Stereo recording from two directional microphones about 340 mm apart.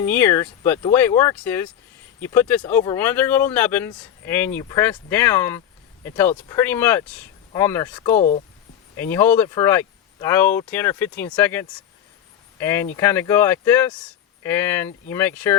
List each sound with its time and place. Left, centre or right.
0.0 s speech: centre
8.2 s speech: left
9.0 s speech: centre